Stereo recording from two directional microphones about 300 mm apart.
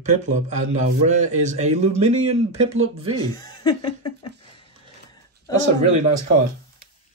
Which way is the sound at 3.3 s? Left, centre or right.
Centre.